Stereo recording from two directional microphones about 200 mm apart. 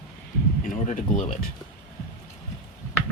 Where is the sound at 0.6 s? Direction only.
40° left (ahead or behind).